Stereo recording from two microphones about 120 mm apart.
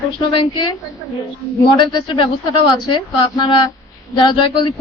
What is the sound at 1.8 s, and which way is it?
Speech, 40° left (ahead or behind).